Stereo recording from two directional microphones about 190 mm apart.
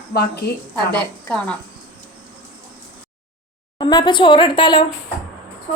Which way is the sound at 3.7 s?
25° left (ahead or behind).